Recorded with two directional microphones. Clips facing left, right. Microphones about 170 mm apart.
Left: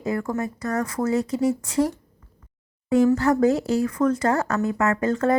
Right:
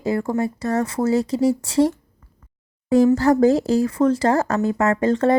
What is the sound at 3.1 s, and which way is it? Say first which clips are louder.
Speech: right 4 dB; 35° right (ahead or behind).